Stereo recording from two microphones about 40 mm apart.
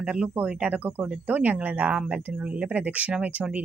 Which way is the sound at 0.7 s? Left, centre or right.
Right.